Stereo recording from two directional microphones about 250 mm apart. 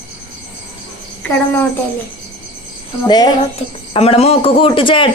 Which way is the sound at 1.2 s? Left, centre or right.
Centre.